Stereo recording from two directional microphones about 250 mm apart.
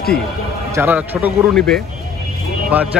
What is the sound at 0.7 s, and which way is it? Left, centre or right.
A man's voice, centre.